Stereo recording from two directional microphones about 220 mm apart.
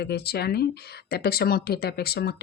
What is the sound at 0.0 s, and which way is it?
Speech, 45° left (ahead or behind).